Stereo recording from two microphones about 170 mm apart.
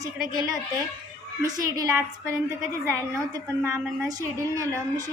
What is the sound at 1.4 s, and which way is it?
A woman's voice, 20° right (ahead or behind).